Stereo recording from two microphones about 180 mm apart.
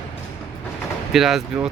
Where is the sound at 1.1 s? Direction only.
Centre (ahead or behind).